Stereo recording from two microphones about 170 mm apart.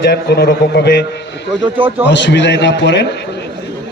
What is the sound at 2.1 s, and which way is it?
Speech, 90° left.